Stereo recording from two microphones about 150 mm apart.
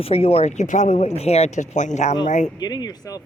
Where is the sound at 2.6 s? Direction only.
25° left (ahead or behind).